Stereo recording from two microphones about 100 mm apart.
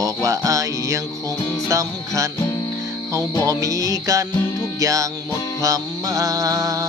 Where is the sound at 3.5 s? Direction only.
35° right (ahead or behind).